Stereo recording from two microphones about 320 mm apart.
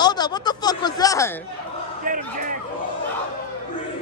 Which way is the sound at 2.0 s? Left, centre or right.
Right.